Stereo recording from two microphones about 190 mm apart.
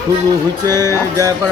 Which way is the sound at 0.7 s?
15° left (ahead or behind).